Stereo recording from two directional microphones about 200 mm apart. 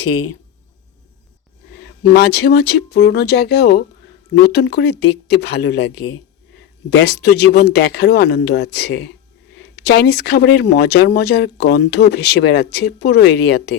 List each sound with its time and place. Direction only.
1.8 s speech: 55° left (ahead or behind)
6.9 s speech: 60° left (ahead or behind)